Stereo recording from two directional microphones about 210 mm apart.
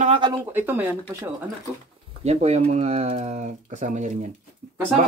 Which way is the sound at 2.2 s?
30° right (ahead or behind).